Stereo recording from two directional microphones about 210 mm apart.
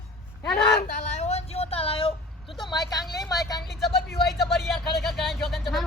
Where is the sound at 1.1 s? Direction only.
30° left (ahead or behind).